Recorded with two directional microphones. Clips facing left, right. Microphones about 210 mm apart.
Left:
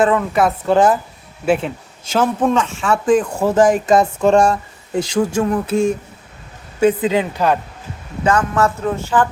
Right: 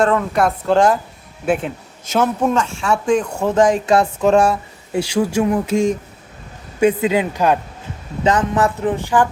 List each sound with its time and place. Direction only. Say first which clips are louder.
0.0 s speech: left 1 dB; 5° left (ahead or behind)
7.1 s speech: even; 15° right (ahead or behind)